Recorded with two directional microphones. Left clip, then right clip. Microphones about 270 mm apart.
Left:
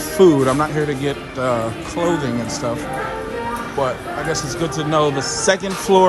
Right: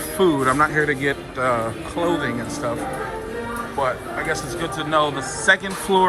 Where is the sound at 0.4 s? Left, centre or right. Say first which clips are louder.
Even; centre.